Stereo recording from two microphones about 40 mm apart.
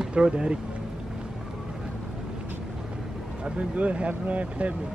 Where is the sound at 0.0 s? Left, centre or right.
Right.